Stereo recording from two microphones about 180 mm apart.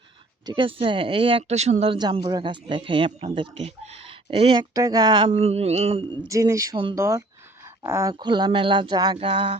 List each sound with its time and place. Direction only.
0.4 s speech: 30° right (ahead or behind)
4.7 s speech: 20° right (ahead or behind)
6.2 s speech: 15° right (ahead or behind)